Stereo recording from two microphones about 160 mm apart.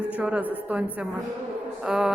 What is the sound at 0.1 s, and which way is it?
A woman's voice, 10° right (ahead or behind).